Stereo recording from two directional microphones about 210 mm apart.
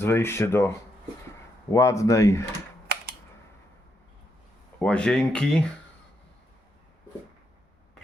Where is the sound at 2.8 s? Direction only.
50° right (ahead or behind).